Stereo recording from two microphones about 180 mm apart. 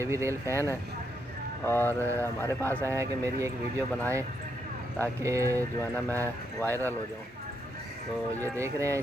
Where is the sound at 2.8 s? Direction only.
15° right (ahead or behind).